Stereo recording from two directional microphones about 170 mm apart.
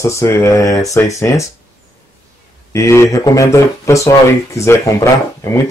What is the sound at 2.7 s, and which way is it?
Speech, 15° left (ahead or behind).